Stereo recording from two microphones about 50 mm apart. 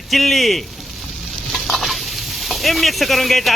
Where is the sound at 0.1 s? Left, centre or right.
Centre.